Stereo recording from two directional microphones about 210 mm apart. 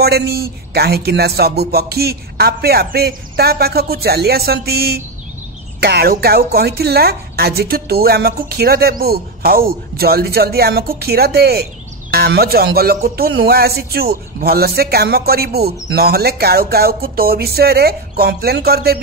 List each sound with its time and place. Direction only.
0.0 s speech: 50° right (ahead or behind)